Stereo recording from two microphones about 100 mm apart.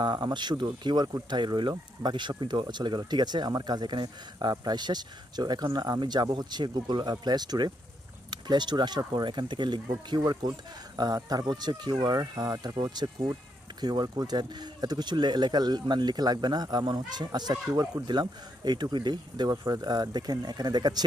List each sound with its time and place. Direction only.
0.0 s speech: 50° right (ahead or behind)